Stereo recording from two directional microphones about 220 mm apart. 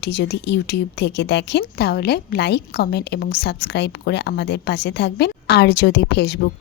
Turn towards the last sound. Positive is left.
turn(degrees=50)  # may be behind; listen again after turning